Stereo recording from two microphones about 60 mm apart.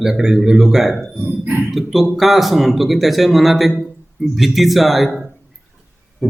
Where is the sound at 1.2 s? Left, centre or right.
Right.